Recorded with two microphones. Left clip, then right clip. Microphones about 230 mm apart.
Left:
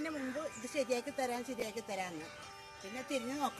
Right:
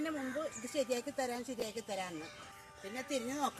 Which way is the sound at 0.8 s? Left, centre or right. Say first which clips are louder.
Even; centre.